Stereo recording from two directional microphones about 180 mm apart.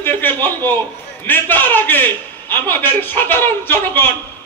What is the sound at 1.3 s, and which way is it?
A man's voice, 10° left (ahead or behind).